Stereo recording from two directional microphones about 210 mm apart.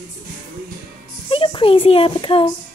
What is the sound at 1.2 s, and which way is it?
A child's voice, 25° left (ahead or behind).